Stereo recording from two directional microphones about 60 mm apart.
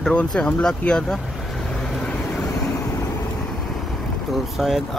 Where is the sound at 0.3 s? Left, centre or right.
Centre.